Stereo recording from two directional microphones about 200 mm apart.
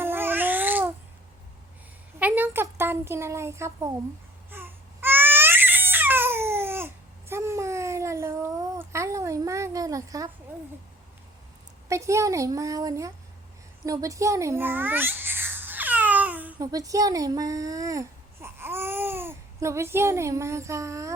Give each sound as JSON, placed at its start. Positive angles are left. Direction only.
{"t": 0.0, "sound": "babbling", "side_deg": -10}
{"t": 2.1, "sound": "speech", "side_deg": -10}
{"t": 4.5, "sound": "baby cry", "side_deg": -10}
{"t": 11.9, "sound": "a woman's voice", "side_deg": -15}
{"t": 13.8, "sound": "babbling", "side_deg": -15}
{"t": 16.7, "sound": "speech", "side_deg": -15}